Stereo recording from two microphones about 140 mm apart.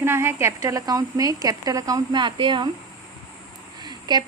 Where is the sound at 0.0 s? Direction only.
15° right (ahead or behind); by 2.6 s 35° right (ahead or behind).